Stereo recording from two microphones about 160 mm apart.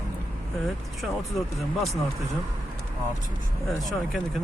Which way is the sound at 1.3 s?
Centre (ahead or behind).